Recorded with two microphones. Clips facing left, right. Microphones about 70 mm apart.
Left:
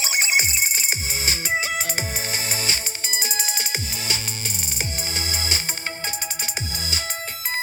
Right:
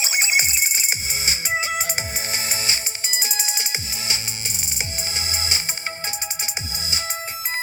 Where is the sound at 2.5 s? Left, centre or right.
Left.